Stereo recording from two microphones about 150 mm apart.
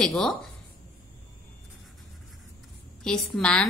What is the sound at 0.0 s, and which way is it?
Speech, 5° left (ahead or behind).